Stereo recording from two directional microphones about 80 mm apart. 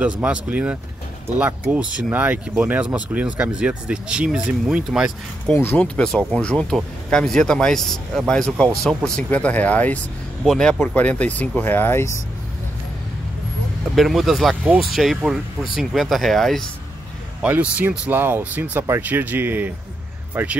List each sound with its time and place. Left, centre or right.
0.0 s speech: centre
5.5 s speech: left
5.9 s speech: centre
9.3 s speech: centre
10.4 s speech: centre
11.0 s speech: centre
13.9 s speech: centre
17.4 s speech: centre